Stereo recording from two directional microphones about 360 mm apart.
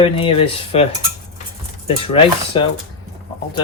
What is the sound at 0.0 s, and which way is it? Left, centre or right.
Speech, centre.